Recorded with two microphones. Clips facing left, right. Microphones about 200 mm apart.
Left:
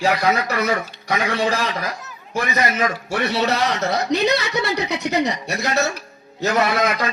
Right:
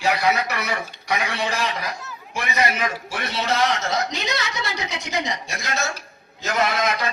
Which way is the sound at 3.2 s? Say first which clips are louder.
Left 3 dB; 70° left (ahead or behind).